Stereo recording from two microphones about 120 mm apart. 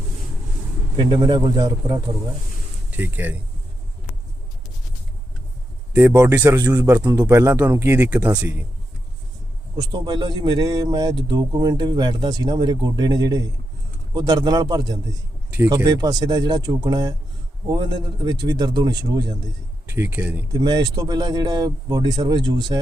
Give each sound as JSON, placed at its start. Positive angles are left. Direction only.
{"t": 0.9, "sound": "a man's voice", "side_deg": -40}
{"t": 2.9, "sound": "speech", "side_deg": -15}
{"t": 5.9, "sound": "speech", "side_deg": -15}
{"t": 9.9, "sound": "a man's voice", "side_deg": -35}
{"t": 19.9, "sound": "speech", "side_deg": -20}
{"t": 20.5, "sound": "a man's voice", "side_deg": -35}